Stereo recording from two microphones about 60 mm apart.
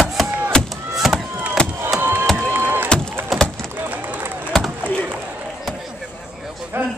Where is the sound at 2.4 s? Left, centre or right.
Right.